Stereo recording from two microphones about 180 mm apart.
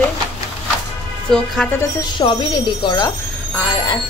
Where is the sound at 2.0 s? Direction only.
25° left (ahead or behind).